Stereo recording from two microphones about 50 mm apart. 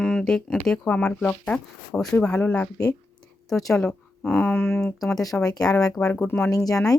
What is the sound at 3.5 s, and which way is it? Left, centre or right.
Speech, centre.